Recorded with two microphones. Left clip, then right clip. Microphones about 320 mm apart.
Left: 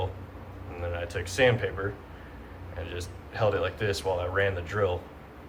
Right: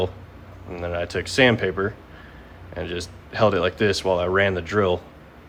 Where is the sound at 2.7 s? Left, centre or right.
Centre.